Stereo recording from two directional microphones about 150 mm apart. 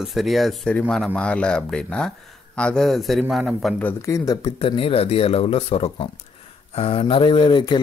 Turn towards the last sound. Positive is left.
turn(degrees=30)  # may be behind; listen again after turning